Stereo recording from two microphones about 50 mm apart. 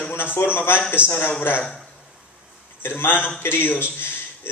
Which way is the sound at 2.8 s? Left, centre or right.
Left.